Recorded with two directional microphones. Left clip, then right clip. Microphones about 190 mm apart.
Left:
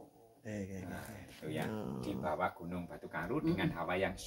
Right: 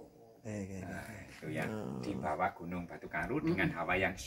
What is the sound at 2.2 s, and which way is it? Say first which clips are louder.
Speech: right 2 dB; 35° left (ahead or behind).